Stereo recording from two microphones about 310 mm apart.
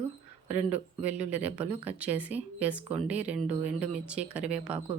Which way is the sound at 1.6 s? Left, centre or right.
Centre.